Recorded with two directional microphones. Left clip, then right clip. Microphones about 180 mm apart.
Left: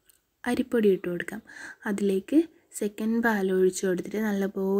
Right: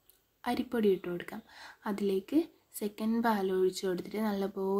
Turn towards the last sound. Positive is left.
turn(degrees=15)  # may be behind; listen again after turning